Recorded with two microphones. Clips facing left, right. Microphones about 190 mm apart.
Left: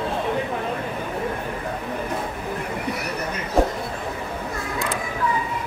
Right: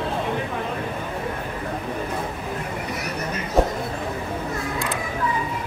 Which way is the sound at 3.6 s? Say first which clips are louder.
Even; centre (ahead or behind).